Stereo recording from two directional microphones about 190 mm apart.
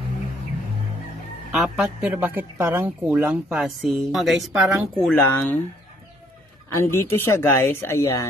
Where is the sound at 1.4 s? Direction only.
5° right (ahead or behind).